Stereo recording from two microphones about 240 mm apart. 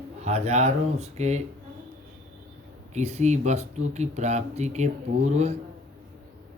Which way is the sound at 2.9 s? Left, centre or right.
Right.